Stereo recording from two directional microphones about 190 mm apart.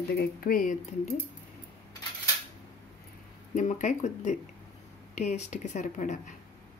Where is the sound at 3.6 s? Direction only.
40° left (ahead or behind).